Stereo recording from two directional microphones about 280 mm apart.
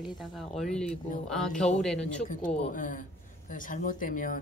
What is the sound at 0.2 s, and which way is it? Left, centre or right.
Speech, centre.